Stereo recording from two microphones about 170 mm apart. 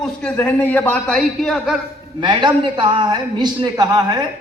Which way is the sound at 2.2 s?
30° right (ahead or behind).